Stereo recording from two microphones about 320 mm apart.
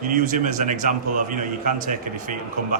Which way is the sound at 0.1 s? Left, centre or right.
Right.